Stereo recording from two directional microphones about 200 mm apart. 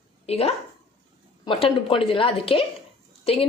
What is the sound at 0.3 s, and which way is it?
A woman's voice, 30° left (ahead or behind).